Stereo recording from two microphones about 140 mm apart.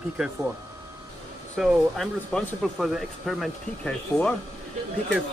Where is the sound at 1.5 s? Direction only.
5° left (ahead or behind).